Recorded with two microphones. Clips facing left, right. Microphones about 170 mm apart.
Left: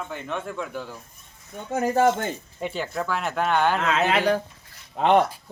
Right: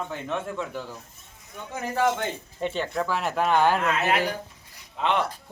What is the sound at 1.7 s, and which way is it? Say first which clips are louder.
Speech: left 5 dB; 50° left (ahead or behind).